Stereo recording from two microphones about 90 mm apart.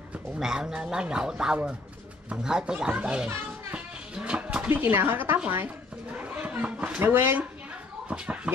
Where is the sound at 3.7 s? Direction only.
10° right (ahead or behind).